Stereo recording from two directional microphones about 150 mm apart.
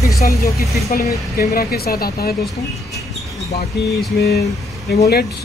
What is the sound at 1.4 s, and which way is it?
Speech, 90° left.